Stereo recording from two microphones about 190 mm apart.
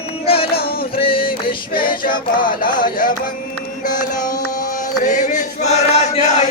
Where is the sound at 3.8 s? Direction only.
45° left (ahead or behind).